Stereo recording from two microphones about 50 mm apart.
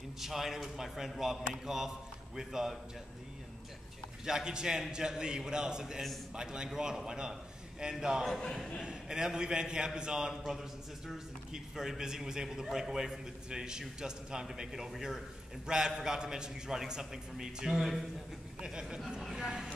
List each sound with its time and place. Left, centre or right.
0.2 s a man's voice: centre
4.2 s a man's voice: centre
8.3 s a man's voice: centre
8.8 s a man's voice: centre
10.4 s a man's voice: centre
18.6 s a man's voice: centre